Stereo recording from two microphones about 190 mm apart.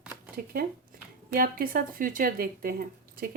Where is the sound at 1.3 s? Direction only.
50° right (ahead or behind).